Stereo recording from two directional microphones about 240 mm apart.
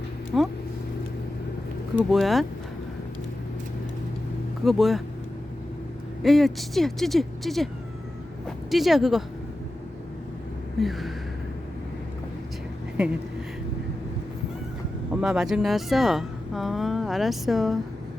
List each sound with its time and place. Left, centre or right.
0.3 s speech: centre
2.0 s speech: centre
4.6 s speech: centre
6.2 s speech: centre
10.8 s a sound: centre
13.0 s speech: centre
15.1 s speech: centre